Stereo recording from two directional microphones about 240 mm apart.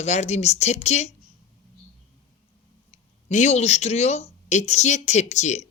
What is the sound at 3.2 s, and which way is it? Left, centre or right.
Speech, left.